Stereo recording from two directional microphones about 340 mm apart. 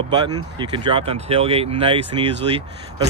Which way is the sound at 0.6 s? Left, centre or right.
Centre.